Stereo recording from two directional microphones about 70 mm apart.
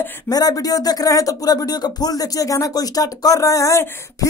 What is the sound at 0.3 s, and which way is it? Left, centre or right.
Speech, left.